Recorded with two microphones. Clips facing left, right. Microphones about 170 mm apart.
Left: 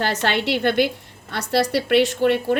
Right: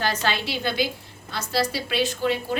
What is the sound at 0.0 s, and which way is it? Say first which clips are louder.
A woman's voice: left 4 dB; 70° left (ahead or behind).